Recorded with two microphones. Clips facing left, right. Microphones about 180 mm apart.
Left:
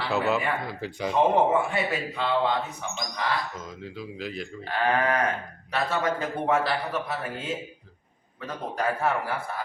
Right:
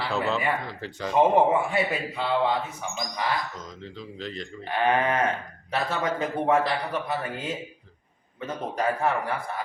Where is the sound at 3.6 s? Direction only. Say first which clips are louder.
Left 2 dB; 5° left (ahead or behind).